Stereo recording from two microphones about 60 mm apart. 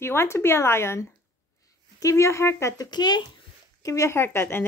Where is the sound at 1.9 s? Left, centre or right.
Left.